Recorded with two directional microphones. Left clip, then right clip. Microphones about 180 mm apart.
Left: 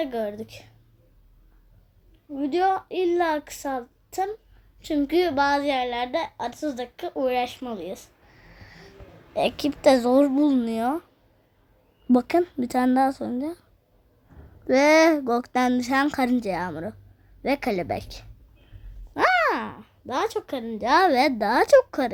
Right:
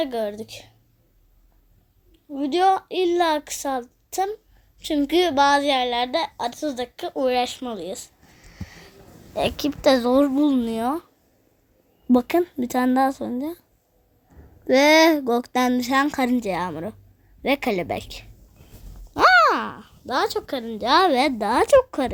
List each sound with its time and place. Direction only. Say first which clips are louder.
0.0 s a woman's voice: right 3 dB; 40° right (ahead or behind)
2.3 s speech: right 4 dB; 40° right (ahead or behind)
8.5 s a sound: right 6 dB; 25° right (ahead or behind)
9.3 s speech: even; 5° right (ahead or behind)
12.0 s speech: right 1 dB; centre (ahead or behind)
14.7 s speech: right 2 dB; 5° right (ahead or behind)
19.1 s speech: right 6 dB; 25° right (ahead or behind); by 22.1 s 5° right (ahead or behind)